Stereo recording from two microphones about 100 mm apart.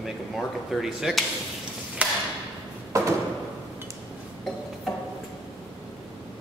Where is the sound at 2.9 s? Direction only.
30° right (ahead or behind).